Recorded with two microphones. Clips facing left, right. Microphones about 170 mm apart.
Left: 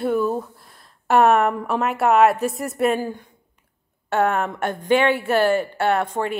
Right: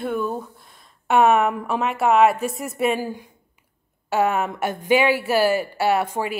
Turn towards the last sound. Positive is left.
turn(degrees=-5)  # may be behind; listen again after turning